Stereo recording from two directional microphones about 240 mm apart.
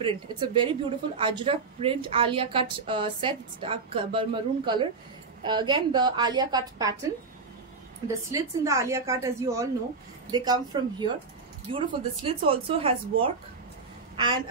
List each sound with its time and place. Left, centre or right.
0.0 s a woman's voice: centre
8.3 s a woman's voice: centre